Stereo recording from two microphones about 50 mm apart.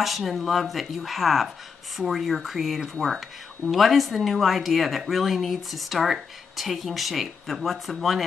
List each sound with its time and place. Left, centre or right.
0.0 s speech: centre